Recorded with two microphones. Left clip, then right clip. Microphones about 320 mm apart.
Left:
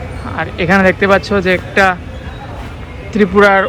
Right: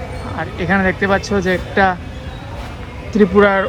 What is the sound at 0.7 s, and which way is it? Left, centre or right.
Speech, centre.